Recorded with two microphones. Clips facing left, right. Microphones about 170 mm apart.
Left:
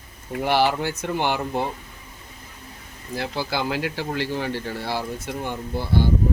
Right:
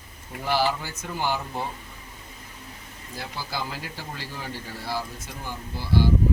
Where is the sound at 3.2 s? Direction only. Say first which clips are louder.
Left 7 dB; 75° left (ahead or behind); by 6.1 s 55° left (ahead or behind).